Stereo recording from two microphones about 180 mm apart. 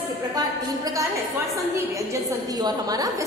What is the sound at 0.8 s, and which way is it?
A woman's voice, 20° right (ahead or behind).